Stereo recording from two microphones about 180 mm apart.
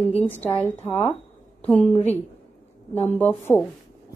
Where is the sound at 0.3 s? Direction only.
10° left (ahead or behind).